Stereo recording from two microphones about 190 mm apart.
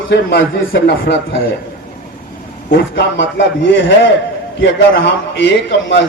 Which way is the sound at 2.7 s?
65° left (ahead or behind).